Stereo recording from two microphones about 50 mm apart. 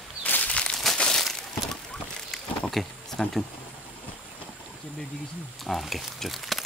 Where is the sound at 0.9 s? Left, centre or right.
Centre.